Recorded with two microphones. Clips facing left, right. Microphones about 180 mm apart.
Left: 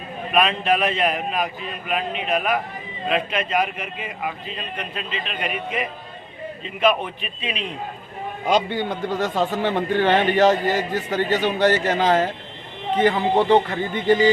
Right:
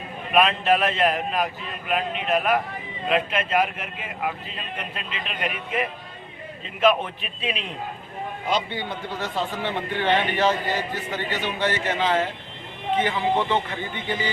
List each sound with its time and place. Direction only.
0.3 s a man's voice: centre (ahead or behind)
8.4 s a man's voice: 45° left (ahead or behind)